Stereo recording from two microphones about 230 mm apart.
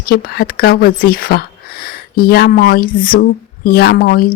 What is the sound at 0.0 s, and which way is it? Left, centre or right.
Speech, left.